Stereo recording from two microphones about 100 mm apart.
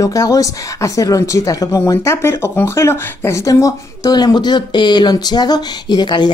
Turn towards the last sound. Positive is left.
turn(degrees=50)  # may be behind; listen again after turning